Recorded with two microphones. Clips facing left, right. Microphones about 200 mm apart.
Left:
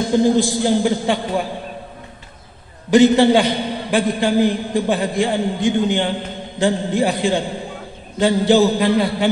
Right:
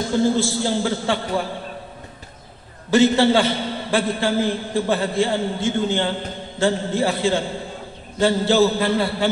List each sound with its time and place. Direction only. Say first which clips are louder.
0.0 s a man's voice: left 4 dB; 15° left (ahead or behind)
2.9 s a man's voice: left 4 dB; 15° left (ahead or behind)